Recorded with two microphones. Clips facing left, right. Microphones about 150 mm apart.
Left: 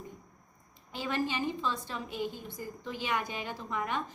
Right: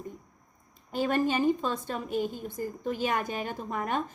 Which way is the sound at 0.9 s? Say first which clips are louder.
Right 6 dB; 50° right (ahead or behind).